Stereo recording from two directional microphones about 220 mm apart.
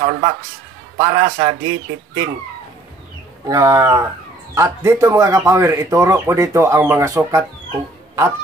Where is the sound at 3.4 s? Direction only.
15° right (ahead or behind).